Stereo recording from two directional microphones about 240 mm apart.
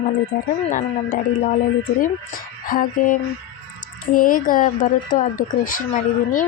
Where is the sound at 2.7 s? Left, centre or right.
Left.